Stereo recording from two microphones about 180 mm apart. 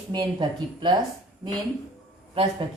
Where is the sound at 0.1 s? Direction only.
25° right (ahead or behind).